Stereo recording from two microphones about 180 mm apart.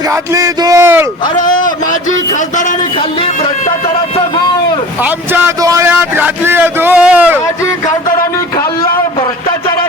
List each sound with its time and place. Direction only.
0.1 s a man's voice: 20° right (ahead or behind)
1.5 s a sound: 45° left (ahead or behind)
5.0 s a man's voice: 10° right (ahead or behind)